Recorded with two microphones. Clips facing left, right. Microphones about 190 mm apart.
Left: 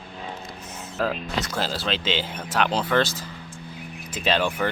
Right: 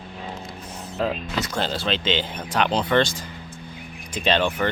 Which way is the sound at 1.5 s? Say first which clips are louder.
Right 3 dB; 5° left (ahead or behind).